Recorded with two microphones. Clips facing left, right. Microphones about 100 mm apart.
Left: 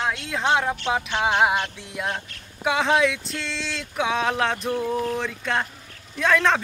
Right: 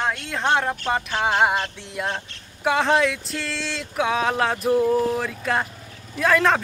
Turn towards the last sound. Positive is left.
turn(degrees=0)  # may be behind; listen again after turning